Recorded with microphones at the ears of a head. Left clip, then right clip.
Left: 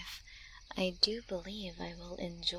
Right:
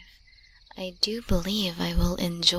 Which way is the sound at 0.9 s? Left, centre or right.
Right.